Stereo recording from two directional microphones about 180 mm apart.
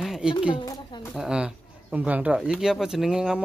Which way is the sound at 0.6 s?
25° left (ahead or behind).